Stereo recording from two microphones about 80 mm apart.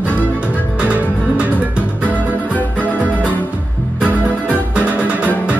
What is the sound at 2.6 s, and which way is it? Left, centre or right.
Music, centre.